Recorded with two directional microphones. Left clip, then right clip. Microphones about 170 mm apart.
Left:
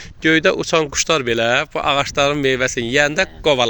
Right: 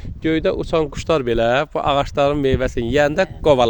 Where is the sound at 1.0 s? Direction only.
30° right (ahead or behind).